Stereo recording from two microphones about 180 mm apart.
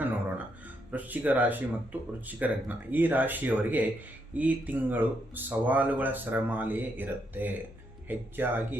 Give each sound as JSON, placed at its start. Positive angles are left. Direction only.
{"t": 0.9, "sound": "speech", "side_deg": -10}